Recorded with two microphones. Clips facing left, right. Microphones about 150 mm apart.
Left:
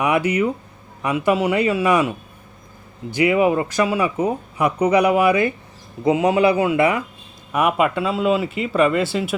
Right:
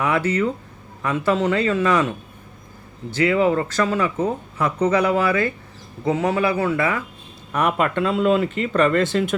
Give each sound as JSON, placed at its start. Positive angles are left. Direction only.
{"t": 0.0, "sound": "speech", "side_deg": 15}
{"t": 7.5, "sound": "speech", "side_deg": 5}